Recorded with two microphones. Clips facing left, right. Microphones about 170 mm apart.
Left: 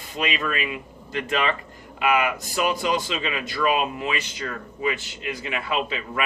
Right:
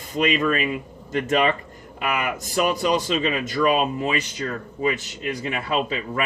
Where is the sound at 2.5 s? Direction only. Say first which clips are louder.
Right 3 dB; 45° right (ahead or behind).